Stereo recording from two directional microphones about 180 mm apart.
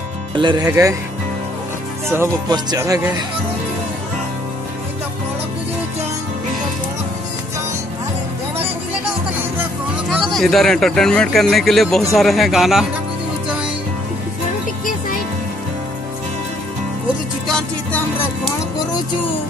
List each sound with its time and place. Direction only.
0.4 s speech: 25° right (ahead or behind)
2.0 s speech: 20° right (ahead or behind)
10.1 s speech: 5° left (ahead or behind)
17.5 s music: 5° left (ahead or behind)